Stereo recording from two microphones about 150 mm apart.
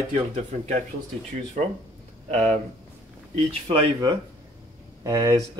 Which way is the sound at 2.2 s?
50° right (ahead or behind).